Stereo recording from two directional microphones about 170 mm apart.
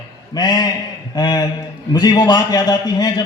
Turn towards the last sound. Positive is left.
turn(degrees=25)  # may be behind; listen again after turning